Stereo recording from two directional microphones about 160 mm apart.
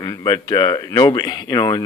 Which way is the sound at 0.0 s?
20° left (ahead or behind).